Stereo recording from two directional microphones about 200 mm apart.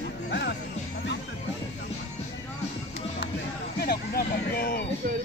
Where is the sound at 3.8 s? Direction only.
50° left (ahead or behind).